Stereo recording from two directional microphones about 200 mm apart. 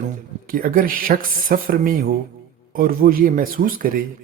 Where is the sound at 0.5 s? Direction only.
45° right (ahead or behind).